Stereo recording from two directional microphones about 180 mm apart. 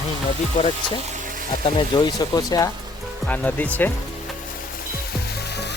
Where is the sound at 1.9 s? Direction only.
25° left (ahead or behind).